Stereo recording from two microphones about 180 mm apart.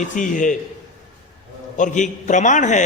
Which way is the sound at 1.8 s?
45° left (ahead or behind).